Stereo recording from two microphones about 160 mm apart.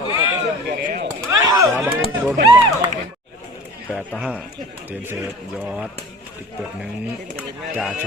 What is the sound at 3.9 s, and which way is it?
Speech, 5° right (ahead or behind).